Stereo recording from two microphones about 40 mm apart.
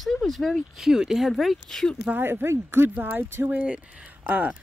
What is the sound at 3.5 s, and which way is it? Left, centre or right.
Speech, right.